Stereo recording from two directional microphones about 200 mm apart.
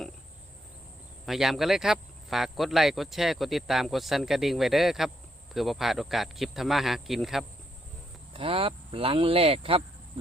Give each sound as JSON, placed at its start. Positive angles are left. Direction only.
{"t": 1.2, "sound": "speech", "side_deg": 0}
{"t": 8.3, "sound": "speech", "side_deg": -30}